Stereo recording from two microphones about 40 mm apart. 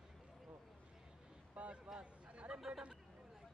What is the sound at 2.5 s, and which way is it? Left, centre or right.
Speech, centre.